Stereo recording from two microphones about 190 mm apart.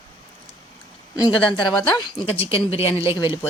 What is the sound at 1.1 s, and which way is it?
Speech, 20° left (ahead or behind).